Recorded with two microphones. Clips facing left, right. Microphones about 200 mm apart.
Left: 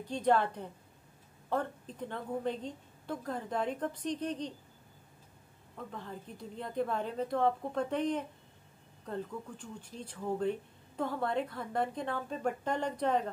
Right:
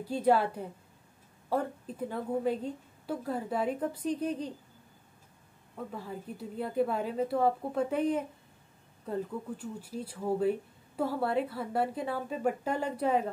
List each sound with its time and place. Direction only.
0.0 s speech: 5° right (ahead or behind)
5.8 s speech: 10° right (ahead or behind)